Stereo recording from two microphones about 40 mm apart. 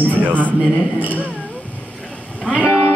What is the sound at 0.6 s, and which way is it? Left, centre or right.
Speech, right.